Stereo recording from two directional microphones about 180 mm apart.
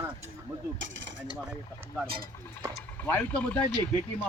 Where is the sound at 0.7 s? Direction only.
90° right.